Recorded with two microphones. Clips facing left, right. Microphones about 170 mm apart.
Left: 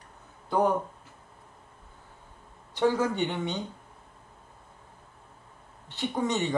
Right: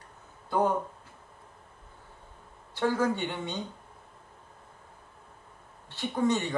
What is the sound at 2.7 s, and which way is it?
Speech, 15° left (ahead or behind).